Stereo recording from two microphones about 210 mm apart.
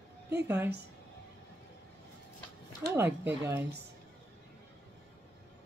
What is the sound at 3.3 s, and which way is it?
Speech, 10° right (ahead or behind).